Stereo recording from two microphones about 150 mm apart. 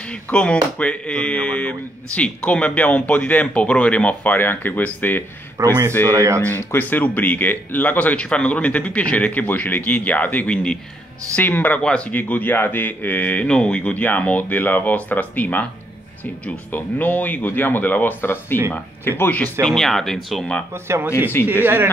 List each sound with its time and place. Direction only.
0.0 s speech: 10° left (ahead or behind)
5.6 s speech: 20° right (ahead or behind)
6.4 s speech: 15° left (ahead or behind)
20.7 s speech: 15° right (ahead or behind)
21.4 s speech: 15° left (ahead or behind)